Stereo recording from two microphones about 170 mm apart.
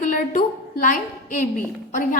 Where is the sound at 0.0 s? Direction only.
50° left (ahead or behind).